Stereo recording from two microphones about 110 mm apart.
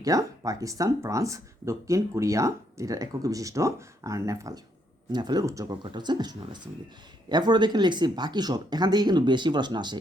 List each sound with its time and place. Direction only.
0.0 s speech: 30° right (ahead or behind)
5.8 s speech: 45° right (ahead or behind)